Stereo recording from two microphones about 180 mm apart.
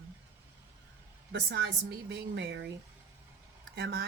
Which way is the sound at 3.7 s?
55° right (ahead or behind).